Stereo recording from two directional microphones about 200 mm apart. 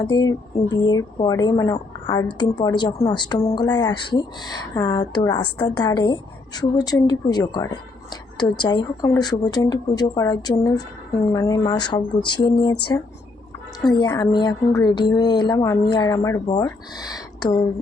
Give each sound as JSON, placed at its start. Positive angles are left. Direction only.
{"t": 0.1, "sound": "speech", "side_deg": 20}
{"t": 13.8, "sound": "speech", "side_deg": 20}